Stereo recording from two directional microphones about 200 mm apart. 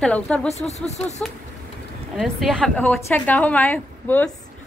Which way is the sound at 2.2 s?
Centre (ahead or behind).